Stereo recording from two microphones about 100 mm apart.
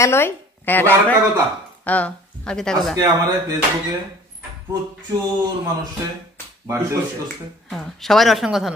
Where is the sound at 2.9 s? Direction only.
40° right (ahead or behind).